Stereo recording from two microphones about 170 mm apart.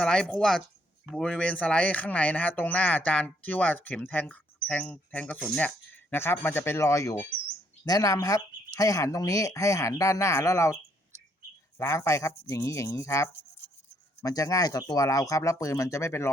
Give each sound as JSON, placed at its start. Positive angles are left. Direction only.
{"t": 0.0, "sound": "speech", "side_deg": 5}
{"t": 11.8, "sound": "speech", "side_deg": 15}